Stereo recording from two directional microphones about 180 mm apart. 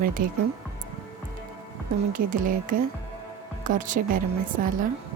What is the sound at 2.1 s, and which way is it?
Speech, 50° right (ahead or behind).